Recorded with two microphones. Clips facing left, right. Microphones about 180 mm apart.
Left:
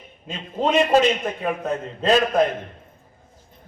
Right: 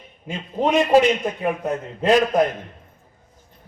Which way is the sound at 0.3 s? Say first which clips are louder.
Right 1 dB; 10° right (ahead or behind).